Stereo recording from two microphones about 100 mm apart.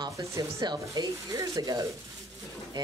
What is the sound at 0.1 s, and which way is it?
Speech, 30° right (ahead or behind).